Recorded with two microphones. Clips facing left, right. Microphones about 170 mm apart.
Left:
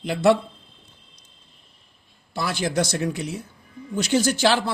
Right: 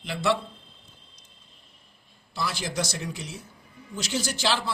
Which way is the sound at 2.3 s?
55° left (ahead or behind).